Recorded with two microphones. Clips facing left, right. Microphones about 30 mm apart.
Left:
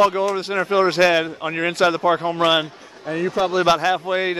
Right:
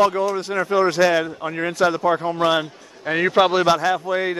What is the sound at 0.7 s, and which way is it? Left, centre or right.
A man's voice, left.